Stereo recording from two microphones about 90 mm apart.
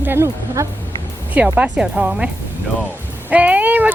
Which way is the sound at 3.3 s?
15° right (ahead or behind).